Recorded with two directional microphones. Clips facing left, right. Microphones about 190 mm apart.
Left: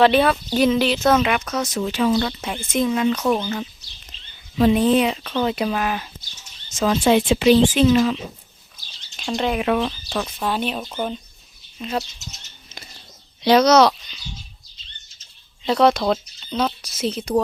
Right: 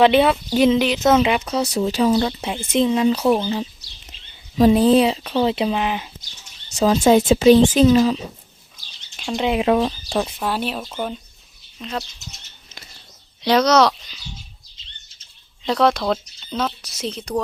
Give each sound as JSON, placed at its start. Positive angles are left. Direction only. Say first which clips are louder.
{"t": 0.0, "sound": "speech", "louder": "right 1 dB", "side_deg": -20}
{"t": 1.7, "sound": "speech", "louder": "right 2 dB", "side_deg": -35}
{"t": 4.1, "sound": "a sound", "louder": "even", "side_deg": -15}
{"t": 4.5, "sound": "speech", "louder": "right 3 dB", "side_deg": -35}
{"t": 6.7, "sound": "speech", "louder": "right 3 dB", "side_deg": -35}
{"t": 9.1, "sound": "speech", "louder": "even", "side_deg": -5}
{"t": 9.5, "sound": "speech", "louder": "right 4 dB", "side_deg": -25}
{"t": 10.4, "sound": "speech", "louder": "even", "side_deg": -5}
{"t": 13.4, "sound": "speech", "louder": "left 2 dB", "side_deg": 10}
{"t": 15.6, "sound": "a woman's voice", "louder": "left 1 dB", "side_deg": 0}